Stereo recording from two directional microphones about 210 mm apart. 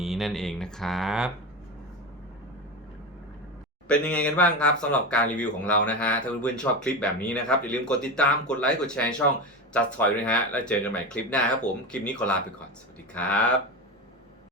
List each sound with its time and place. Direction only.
0.0 s speech: centre (ahead or behind)
3.8 s speech: 5° left (ahead or behind)